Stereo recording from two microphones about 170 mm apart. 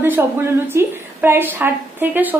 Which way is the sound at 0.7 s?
15° right (ahead or behind).